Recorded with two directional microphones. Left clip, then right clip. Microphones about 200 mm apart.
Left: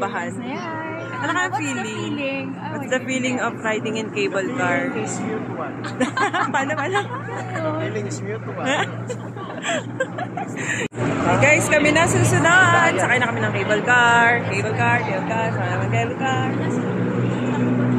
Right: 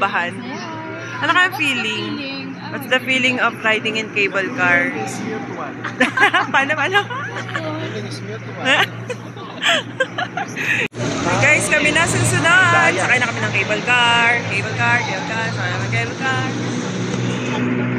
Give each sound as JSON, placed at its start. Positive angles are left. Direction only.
{"t": 0.0, "sound": "speech", "side_deg": 0}
{"t": 5.9, "sound": "speech", "side_deg": 0}
{"t": 9.6, "sound": "speech", "side_deg": 0}
{"t": 13.7, "sound": "speech", "side_deg": 35}